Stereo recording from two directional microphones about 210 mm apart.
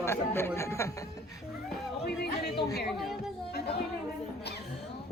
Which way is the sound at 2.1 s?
50° left (ahead or behind).